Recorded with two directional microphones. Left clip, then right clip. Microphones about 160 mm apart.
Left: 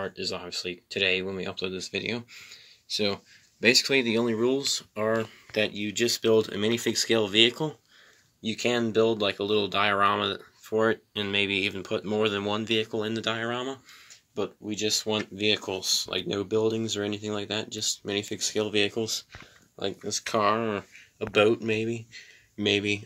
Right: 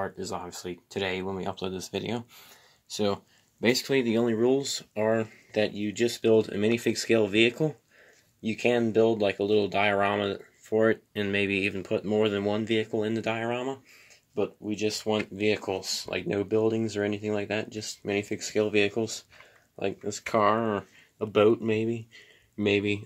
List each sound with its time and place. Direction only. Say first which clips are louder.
0.5 s speech: left 5 dB; 30° right (ahead or behind)
2.9 s speech: left 1 dB; 25° right (ahead or behind)